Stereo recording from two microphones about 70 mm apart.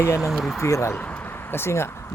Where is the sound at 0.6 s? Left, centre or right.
Left.